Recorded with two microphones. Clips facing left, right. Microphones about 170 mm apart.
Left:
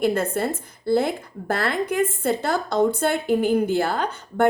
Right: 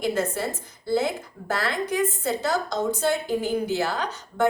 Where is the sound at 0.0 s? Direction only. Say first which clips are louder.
Left 4 dB; 55° left (ahead or behind).